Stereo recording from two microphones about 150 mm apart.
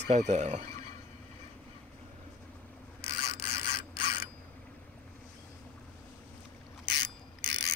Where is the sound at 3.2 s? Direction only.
65° left (ahead or behind).